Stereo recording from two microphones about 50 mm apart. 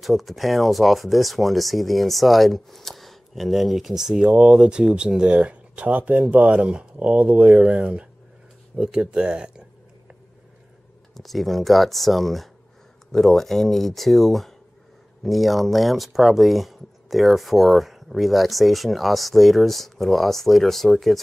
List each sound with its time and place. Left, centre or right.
0.0 s speech: centre
11.1 s speech: centre